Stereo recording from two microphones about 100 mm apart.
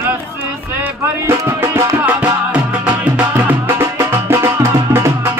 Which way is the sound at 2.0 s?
15° right (ahead or behind).